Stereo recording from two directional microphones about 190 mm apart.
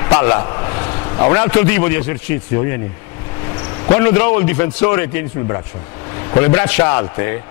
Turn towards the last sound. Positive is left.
turn(degrees=15)  # may be behind; listen again after turning